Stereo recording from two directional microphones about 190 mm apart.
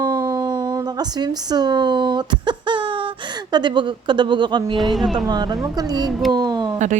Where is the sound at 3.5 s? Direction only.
25° right (ahead or behind).